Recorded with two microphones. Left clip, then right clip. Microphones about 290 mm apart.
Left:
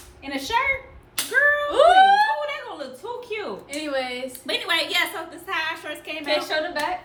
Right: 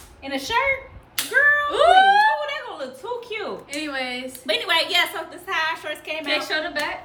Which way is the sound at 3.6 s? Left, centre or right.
Centre.